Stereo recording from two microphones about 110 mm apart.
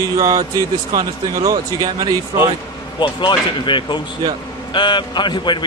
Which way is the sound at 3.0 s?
50° left (ahead or behind).